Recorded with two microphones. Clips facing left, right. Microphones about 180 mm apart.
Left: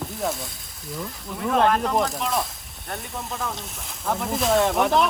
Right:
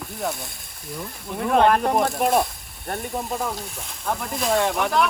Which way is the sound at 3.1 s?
15° right (ahead or behind).